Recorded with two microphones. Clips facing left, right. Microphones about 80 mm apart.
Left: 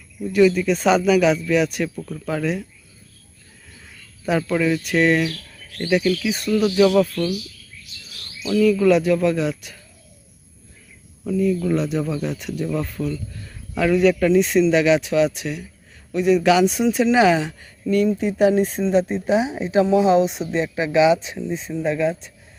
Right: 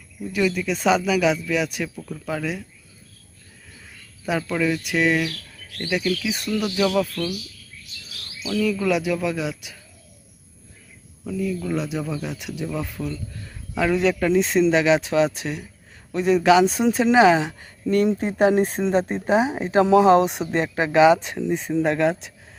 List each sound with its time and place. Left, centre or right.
0.3 s speech: centre
4.3 s speech: centre
8.6 s speech: centre
11.2 s speech: centre; by 17.9 s right
18.2 s speech: right
21.4 s speech: right